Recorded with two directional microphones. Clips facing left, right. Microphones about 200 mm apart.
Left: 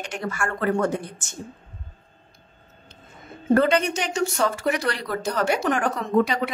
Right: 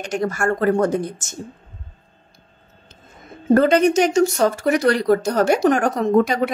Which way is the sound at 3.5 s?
40° right (ahead or behind).